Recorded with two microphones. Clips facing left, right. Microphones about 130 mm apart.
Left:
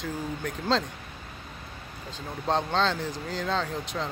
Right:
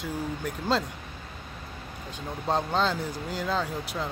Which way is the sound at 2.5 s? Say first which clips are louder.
Even; 5° right (ahead or behind).